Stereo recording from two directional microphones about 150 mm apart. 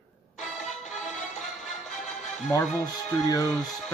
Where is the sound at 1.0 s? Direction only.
5° left (ahead or behind).